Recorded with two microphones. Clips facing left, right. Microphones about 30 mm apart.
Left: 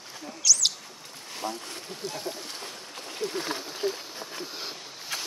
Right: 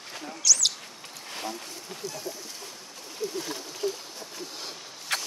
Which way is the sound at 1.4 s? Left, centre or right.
Left.